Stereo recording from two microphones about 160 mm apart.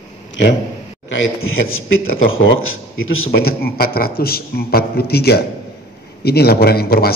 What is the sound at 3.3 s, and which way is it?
A man's voice, 70° left (ahead or behind).